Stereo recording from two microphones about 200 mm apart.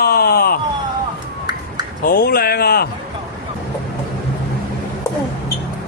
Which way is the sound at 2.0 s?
50° left (ahead or behind).